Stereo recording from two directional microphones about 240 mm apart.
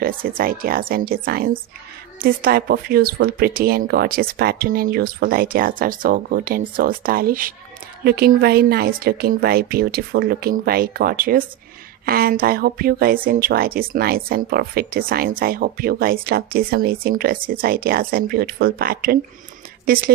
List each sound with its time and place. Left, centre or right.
0.0 s speech: right